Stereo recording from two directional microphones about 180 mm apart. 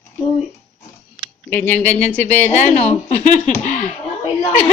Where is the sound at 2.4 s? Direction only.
40° left (ahead or behind).